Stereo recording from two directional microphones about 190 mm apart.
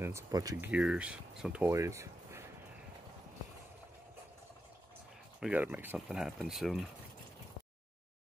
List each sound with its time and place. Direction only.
0.0 s speech: 15° right (ahead or behind)
0.7 s speech: 5° right (ahead or behind)
5.4 s speech: 10° right (ahead or behind)